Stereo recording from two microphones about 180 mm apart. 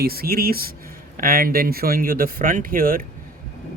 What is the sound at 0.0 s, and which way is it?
Speech, 55° right (ahead or behind).